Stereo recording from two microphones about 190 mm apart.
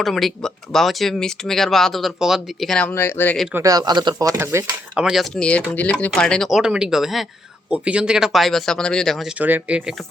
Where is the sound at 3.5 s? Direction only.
20° right (ahead or behind).